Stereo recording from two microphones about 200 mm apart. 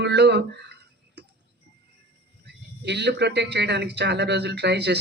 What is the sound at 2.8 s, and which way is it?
Speech, 60° right (ahead or behind).